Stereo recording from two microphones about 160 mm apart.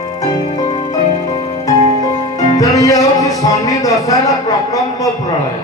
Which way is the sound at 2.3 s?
25° left (ahead or behind).